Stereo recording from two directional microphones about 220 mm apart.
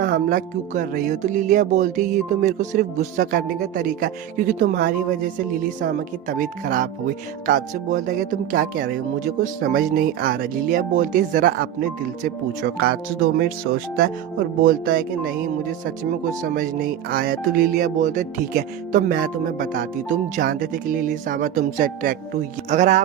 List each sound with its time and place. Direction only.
0.0 s speech: 40° right (ahead or behind)